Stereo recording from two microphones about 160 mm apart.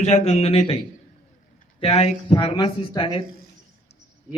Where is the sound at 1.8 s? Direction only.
45° left (ahead or behind).